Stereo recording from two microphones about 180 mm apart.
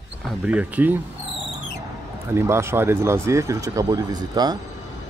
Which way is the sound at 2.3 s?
15° right (ahead or behind).